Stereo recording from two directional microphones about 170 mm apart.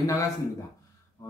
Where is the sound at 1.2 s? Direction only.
20° left (ahead or behind).